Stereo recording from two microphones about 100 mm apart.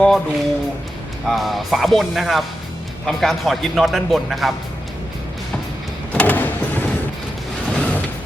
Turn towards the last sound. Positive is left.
turn(degrees=10)  # may be behind; listen again after turning